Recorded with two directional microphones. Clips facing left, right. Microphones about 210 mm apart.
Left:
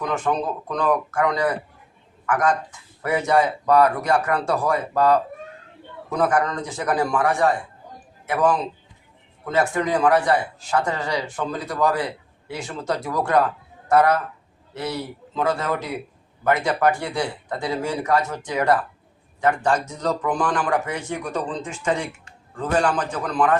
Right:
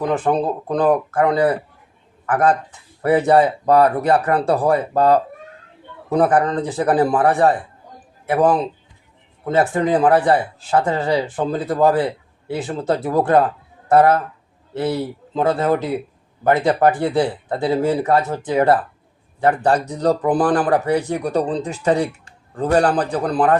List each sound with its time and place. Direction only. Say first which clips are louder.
0.0 s a man's voice: right 5 dB; 35° right (ahead or behind)